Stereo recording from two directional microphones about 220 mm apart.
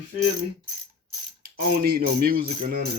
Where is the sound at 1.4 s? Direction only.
45° right (ahead or behind).